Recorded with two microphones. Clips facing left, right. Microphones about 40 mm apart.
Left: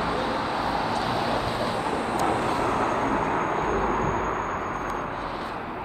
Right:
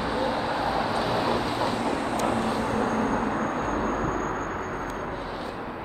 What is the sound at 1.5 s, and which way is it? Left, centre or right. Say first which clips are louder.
Vehicle: even; centre.